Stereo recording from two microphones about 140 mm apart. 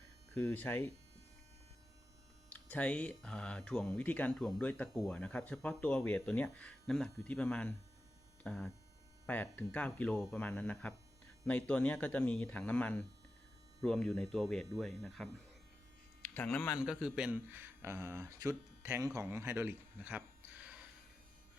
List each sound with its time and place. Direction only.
0.3 s speech: 10° left (ahead or behind)
2.5 s speech: 10° left (ahead or behind)
16.2 s speech: 15° left (ahead or behind)
16.7 s a man's voice: 5° right (ahead or behind)